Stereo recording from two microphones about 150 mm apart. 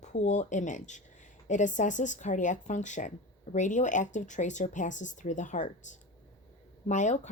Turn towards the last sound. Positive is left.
turn(degrees=50)  # may be behind; listen again after turning